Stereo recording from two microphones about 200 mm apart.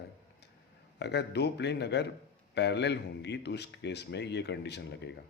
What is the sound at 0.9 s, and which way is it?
Speech, 55° left (ahead or behind).